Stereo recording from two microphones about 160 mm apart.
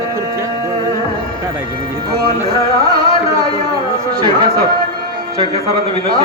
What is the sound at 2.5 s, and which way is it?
Music, 35° left (ahead or behind).